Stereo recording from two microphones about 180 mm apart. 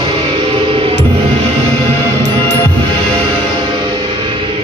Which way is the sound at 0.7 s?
30° right (ahead or behind).